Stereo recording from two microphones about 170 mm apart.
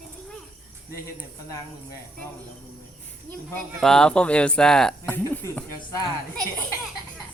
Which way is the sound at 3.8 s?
5° left (ahead or behind).